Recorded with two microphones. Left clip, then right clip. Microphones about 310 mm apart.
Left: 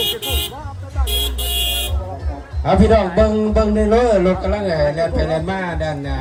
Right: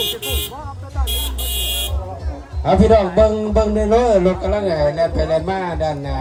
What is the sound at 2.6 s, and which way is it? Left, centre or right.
A man's voice, right.